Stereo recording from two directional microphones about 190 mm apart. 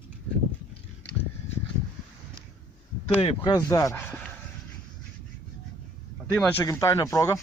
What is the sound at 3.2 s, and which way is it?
Speech, 20° left (ahead or behind).